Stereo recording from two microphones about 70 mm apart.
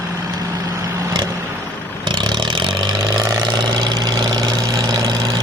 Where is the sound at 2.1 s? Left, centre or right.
Right.